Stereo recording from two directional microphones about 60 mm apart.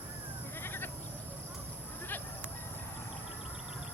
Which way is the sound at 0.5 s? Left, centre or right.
Left.